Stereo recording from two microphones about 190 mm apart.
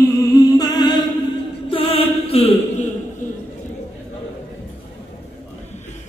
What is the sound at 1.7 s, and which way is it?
Mantra, 30° left (ahead or behind).